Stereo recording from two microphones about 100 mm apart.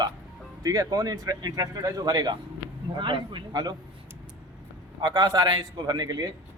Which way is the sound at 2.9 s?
55° right (ahead or behind).